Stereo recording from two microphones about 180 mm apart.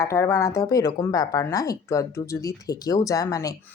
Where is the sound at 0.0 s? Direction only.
15° left (ahead or behind).